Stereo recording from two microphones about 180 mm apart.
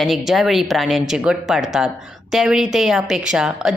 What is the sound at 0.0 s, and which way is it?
Speech, centre (ahead or behind).